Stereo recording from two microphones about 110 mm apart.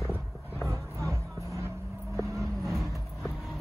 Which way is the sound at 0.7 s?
25° right (ahead or behind).